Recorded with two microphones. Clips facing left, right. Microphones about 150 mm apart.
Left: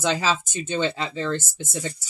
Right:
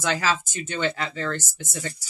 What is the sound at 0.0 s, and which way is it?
Speech, 20° left (ahead or behind).